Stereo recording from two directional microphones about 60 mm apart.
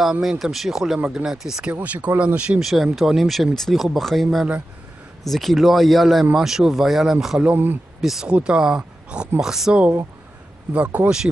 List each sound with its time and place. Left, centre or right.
0.0 s speech: centre
1.7 s speech: right
2.6 s speech: centre
7.5 s speech: right
8.0 s speech: centre
8.3 s speech: centre
10.7 s speech: right